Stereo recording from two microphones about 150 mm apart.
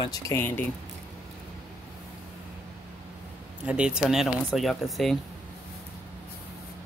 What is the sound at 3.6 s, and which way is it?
Speech, 5° right (ahead or behind).